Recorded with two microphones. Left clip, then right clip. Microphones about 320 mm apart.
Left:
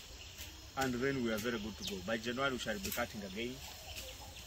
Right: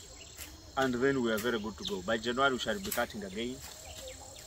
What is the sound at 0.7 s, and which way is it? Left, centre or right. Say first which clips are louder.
Speech: right 7 dB; centre.